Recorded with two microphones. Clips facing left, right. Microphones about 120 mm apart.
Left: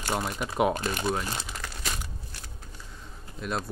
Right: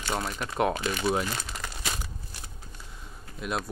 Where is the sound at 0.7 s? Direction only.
45° left (ahead or behind).